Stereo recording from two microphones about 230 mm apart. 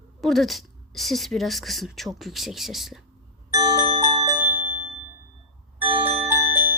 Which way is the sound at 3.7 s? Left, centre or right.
Right.